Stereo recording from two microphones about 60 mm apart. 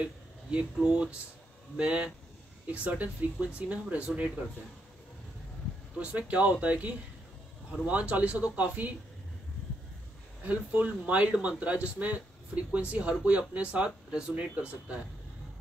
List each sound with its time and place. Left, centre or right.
0.0 s speech: centre
5.9 s speech: right
10.4 s speech: right